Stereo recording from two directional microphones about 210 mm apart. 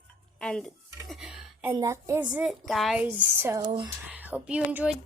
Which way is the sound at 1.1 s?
Centre (ahead or behind).